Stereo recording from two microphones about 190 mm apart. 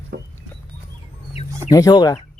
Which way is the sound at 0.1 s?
55° right (ahead or behind).